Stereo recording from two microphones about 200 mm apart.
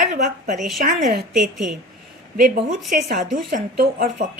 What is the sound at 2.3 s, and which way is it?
A woman's voice, 40° right (ahead or behind).